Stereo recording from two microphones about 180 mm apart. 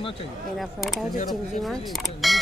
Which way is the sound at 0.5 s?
Centre (ahead or behind).